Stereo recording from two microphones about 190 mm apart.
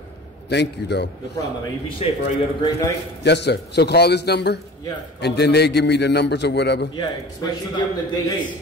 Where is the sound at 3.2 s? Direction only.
65° left (ahead or behind).